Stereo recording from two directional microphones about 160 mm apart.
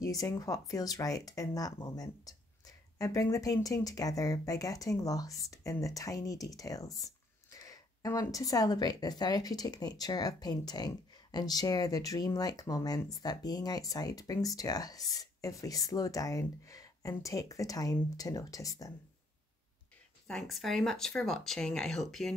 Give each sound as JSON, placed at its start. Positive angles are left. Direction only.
{"t": 0.0, "sound": "speech", "side_deg": 20}
{"t": 20.2, "sound": "speech", "side_deg": 0}